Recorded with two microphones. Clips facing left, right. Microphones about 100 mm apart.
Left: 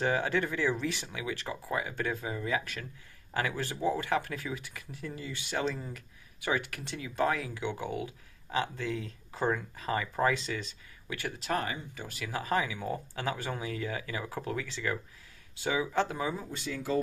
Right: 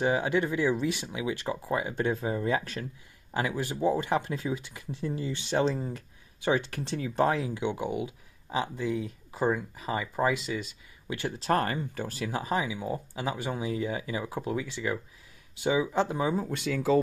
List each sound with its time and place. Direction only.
0.0 s speech: 20° right (ahead or behind); by 2.9 s 35° right (ahead or behind)
3.3 s speech: 20° right (ahead or behind)
11.1 s speech: 25° right (ahead or behind)
11.5 s speech: 50° right (ahead or behind)
12.1 s speech: 30° right (ahead or behind)
16.4 s speech: 80° right